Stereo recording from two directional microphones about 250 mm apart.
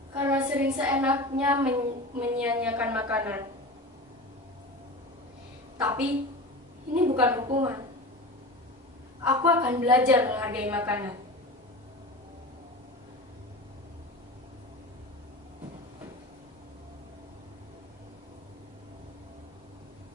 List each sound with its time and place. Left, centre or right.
0.1 s a sound: centre
1.4 s a woman's voice: centre
5.7 s a woman's voice: centre
6.9 s a woman's voice: right
7.2 s a woman's voice: centre
9.2 s a woman's voice: centre